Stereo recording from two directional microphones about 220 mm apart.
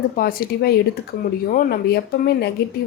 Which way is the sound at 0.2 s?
45° left (ahead or behind).